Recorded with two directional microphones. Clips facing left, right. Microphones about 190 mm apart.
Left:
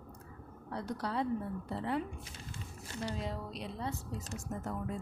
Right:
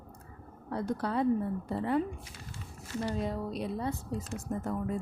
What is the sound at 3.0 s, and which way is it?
Speech, 50° right (ahead or behind).